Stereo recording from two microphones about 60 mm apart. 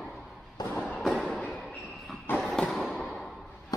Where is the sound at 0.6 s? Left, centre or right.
Left.